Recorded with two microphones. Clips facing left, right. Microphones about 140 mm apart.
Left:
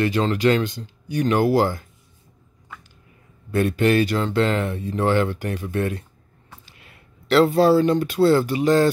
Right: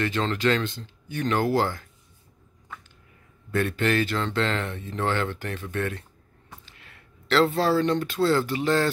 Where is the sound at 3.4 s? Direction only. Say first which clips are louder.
Left 5 dB; 15° left (ahead or behind).